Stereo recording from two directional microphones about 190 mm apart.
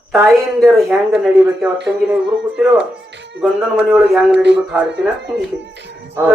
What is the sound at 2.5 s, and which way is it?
Speech, 5° right (ahead or behind).